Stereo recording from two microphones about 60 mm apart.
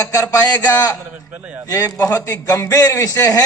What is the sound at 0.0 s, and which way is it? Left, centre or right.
Speech, left.